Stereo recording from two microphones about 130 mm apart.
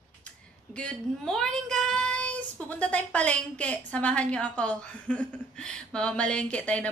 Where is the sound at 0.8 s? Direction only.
5° left (ahead or behind).